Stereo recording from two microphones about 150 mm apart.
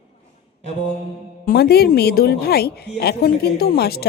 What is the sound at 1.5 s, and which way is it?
A woman's voice, 90° left.